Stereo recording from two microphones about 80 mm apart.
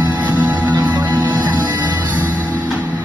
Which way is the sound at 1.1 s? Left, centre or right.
Right.